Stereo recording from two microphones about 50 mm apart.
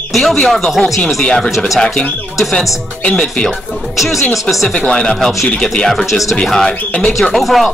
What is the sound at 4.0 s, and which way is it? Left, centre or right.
Speech, centre.